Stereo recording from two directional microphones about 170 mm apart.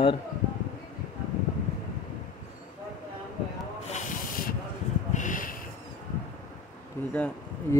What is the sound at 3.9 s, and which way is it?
Snake, 60° left (ahead or behind).